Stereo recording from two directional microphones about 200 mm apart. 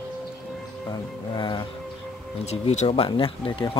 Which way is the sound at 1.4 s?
20° left (ahead or behind).